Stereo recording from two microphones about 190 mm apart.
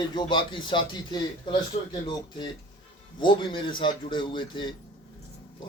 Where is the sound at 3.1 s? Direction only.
25° left (ahead or behind).